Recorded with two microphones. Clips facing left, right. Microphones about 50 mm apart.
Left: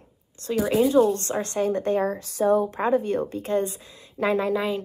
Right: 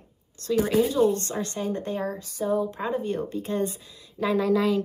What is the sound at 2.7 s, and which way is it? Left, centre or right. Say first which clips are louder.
A woman's voice: left 5 dB; left.